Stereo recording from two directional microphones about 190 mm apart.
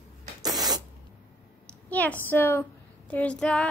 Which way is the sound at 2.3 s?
10° left (ahead or behind).